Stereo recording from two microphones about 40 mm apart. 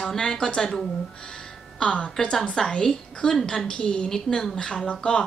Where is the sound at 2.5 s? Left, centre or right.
Centre.